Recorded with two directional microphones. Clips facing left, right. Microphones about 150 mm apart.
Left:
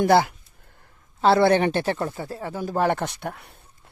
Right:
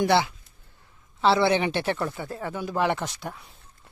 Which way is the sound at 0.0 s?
45° left (ahead or behind).